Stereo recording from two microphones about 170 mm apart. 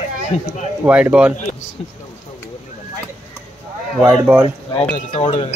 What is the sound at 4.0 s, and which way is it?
Speech, 10° right (ahead or behind).